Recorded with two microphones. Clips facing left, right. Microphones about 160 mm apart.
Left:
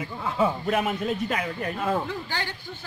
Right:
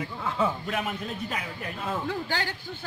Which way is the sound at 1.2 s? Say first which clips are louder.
Left 6 dB; 55° left (ahead or behind).